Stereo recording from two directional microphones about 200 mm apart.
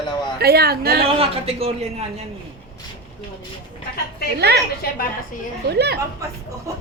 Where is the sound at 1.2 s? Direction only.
30° right (ahead or behind).